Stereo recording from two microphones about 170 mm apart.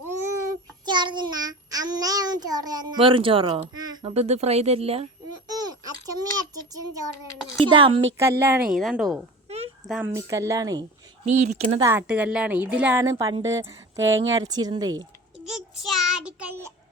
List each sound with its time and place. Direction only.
0.9 s child singing: 25° right (ahead or behind)
3.8 s a sound: 25° right (ahead or behind)
4.1 s speech: 40° right (ahead or behind)
5.5 s a child's voice: 20° right (ahead or behind)
7.6 s speech: 30° right (ahead or behind)
8.2 s a woman's voice: 15° right (ahead or behind)
8.7 s a woman's voice: centre (ahead or behind)
10.2 s speech: 20° right (ahead or behind)
11.3 s speech: 40° right (ahead or behind)
11.8 s a woman's voice: 15° right (ahead or behind)
15.4 s child singing: centre (ahead or behind)